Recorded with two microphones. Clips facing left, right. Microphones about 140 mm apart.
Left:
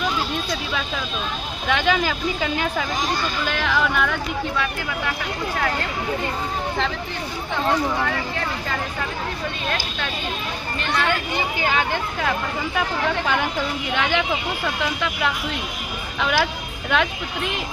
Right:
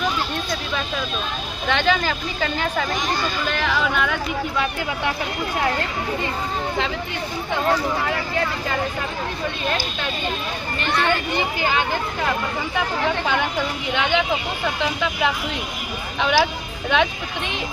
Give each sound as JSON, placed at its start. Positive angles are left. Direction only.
{"t": 1.6, "sound": "speech", "side_deg": 5}
{"t": 4.5, "sound": "speech", "side_deg": -25}
{"t": 10.8, "sound": "speech", "side_deg": 0}
{"t": 13.2, "sound": "speech", "side_deg": 0}
{"t": 16.2, "sound": "speech", "side_deg": 0}